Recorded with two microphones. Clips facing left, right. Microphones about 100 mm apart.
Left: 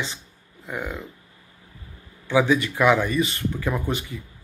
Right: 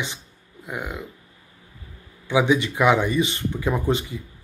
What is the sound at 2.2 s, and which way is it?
Speech, 20° right (ahead or behind).